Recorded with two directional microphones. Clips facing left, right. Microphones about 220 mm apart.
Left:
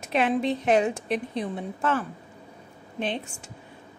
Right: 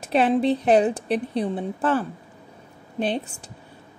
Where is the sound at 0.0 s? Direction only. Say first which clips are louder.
Right 4 dB; 35° right (ahead or behind).